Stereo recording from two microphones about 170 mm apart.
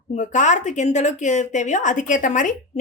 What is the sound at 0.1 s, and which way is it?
Speech, 45° left (ahead or behind).